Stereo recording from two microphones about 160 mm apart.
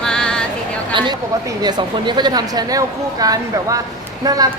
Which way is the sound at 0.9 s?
30° right (ahead or behind).